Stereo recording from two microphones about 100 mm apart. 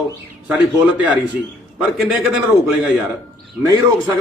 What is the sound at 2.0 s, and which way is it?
Speech, 5° right (ahead or behind).